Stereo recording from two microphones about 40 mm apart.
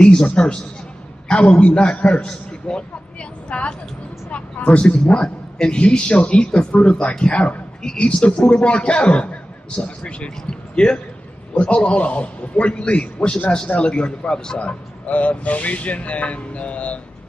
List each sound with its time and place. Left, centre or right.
0.0 s a man's voice: left
1.3 s a man's voice: left
14.6 s speech: left